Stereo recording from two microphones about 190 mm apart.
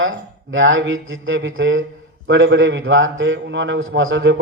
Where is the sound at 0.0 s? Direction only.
90° right.